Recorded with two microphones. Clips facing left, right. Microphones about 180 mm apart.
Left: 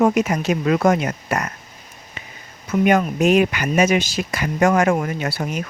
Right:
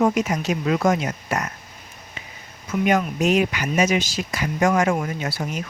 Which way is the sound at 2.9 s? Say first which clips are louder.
Left 3 dB; 55° left (ahead or behind).